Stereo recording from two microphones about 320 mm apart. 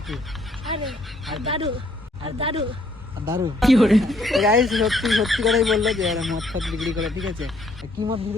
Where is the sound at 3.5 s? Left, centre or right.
Centre.